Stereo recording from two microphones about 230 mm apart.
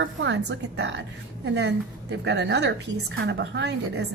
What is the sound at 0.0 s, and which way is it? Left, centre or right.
A woman's voice, right.